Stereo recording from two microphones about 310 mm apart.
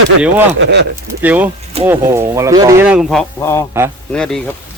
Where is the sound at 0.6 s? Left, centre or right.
Right.